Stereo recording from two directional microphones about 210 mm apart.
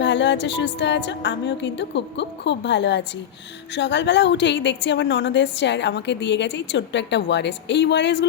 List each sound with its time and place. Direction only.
0.0 s a woman's voice: 55° left (ahead or behind)